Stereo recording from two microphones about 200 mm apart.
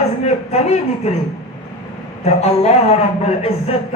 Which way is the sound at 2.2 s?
30° left (ahead or behind).